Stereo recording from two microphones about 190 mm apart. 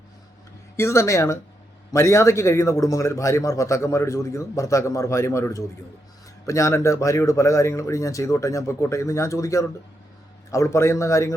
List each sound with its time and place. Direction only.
0.8 s a man's voice: 15° left (ahead or behind)